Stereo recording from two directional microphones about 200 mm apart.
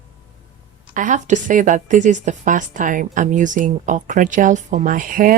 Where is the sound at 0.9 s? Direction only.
40° right (ahead or behind).